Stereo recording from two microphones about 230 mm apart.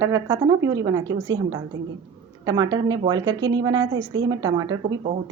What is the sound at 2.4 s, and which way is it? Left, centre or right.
A woman's voice, centre.